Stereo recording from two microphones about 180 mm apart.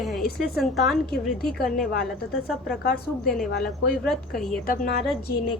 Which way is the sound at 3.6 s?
Centre (ahead or behind).